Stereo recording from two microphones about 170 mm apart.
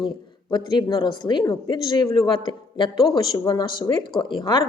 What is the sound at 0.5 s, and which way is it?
A woman's voice, 25° left (ahead or behind).